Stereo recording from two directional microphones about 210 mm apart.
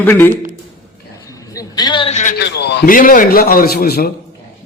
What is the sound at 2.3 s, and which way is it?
A man's voice, 55° left (ahead or behind).